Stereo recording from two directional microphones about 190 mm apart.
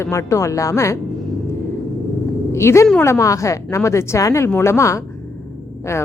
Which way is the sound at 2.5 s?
15° left (ahead or behind).